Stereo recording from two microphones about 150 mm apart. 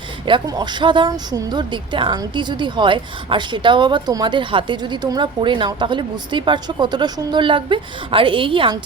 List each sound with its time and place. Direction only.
0.3 s speech: 30° right (ahead or behind)